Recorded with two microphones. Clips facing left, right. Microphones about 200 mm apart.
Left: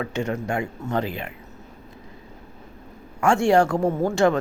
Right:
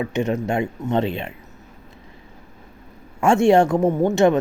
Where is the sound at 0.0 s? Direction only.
20° right (ahead or behind).